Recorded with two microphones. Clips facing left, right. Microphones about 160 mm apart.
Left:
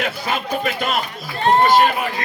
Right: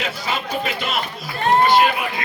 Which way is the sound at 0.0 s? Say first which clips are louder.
Left 2 dB; 50° left (ahead or behind).